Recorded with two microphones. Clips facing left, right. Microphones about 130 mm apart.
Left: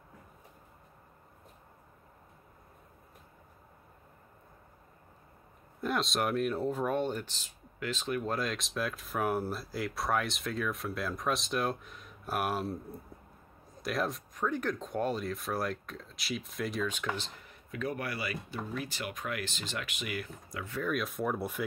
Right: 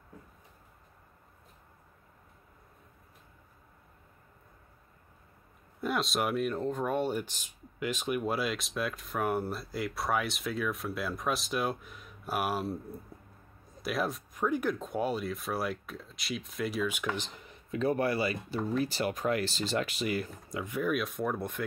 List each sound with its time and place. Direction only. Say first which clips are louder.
5.8 s speech: right 1 dB; centre (ahead or behind)
17.6 s speech: right 7 dB; 30° right (ahead or behind); by 20.9 s 15° right (ahead or behind)
20.9 s speech: left 2 dB; centre (ahead or behind)